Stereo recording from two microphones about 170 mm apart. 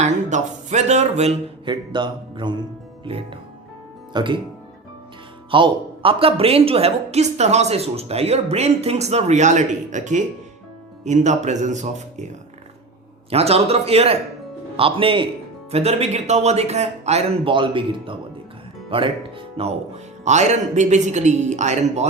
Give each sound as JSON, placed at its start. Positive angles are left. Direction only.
{"t": 0.0, "sound": "a woman's voice", "side_deg": -45}
{"t": 5.5, "sound": "a woman's voice", "side_deg": -30}
{"t": 13.3, "sound": "a woman's voice", "side_deg": -35}
{"t": 20.2, "sound": "speech", "side_deg": -45}